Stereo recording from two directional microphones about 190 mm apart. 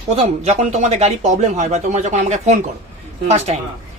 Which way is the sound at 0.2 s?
35° right (ahead or behind).